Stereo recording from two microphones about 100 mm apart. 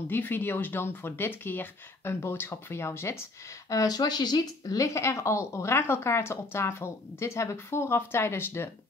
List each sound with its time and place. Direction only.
0.1 s speech: 20° left (ahead or behind)